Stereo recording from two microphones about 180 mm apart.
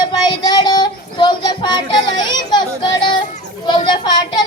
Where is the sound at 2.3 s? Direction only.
25° left (ahead or behind).